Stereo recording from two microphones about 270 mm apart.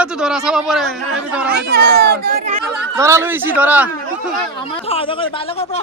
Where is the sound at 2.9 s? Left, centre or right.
Centre.